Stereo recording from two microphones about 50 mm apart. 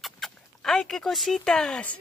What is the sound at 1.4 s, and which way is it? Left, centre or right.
Speech, centre.